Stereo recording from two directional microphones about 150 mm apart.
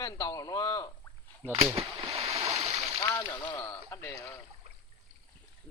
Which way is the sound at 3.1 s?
20° left (ahead or behind).